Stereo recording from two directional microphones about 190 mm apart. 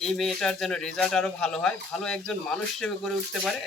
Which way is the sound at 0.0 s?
Centre (ahead or behind).